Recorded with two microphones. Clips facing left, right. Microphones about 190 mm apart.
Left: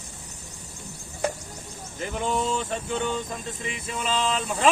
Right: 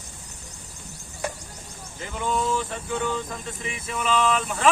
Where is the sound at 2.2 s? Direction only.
20° left (ahead or behind).